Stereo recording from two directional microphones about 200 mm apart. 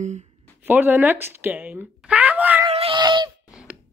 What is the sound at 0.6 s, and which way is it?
Speech, 10° right (ahead or behind).